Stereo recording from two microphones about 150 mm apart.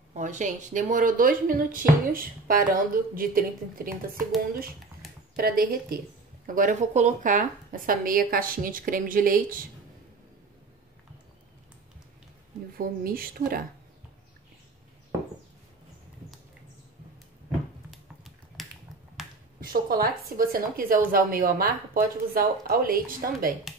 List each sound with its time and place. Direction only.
0.1 s speech: 55° right (ahead or behind); by 4.2 s 75° right (ahead or behind)
5.3 s speech: 80° right
6.4 s speech: 60° right (ahead or behind)
12.7 s speech: 75° right (ahead or behind)
17.9 s a sound: centre (ahead or behind)
19.2 s finger snapping: centre (ahead or behind)
19.6 s speech: 75° right (ahead or behind)